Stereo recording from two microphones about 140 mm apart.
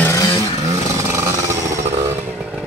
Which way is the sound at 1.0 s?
20° right (ahead or behind).